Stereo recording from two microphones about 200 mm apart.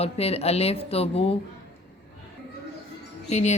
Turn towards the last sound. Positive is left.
turn(degrees=35)  # may be behind; listen again after turning